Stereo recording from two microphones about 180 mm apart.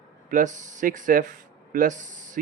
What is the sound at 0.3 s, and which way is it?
Speech, 45° right (ahead or behind).